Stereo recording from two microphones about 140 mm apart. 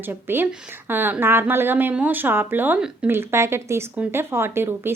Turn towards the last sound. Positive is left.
turn(degrees=-15)  # may be behind; listen again after turning